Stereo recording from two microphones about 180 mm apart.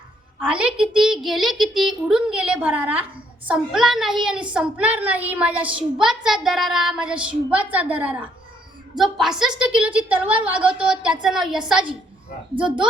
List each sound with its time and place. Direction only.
0.3 s a child's voice: 5° right (ahead or behind)